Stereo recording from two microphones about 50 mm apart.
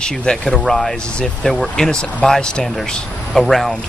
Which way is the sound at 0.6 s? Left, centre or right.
Centre.